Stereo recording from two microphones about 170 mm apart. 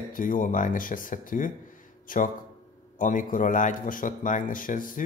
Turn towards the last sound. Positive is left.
turn(degrees=55)  # may be behind; listen again after turning